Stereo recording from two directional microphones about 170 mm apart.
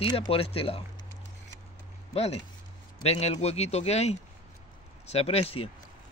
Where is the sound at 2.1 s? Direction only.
35° left (ahead or behind).